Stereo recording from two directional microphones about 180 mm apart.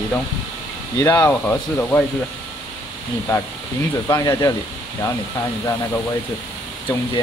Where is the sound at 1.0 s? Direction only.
20° left (ahead or behind).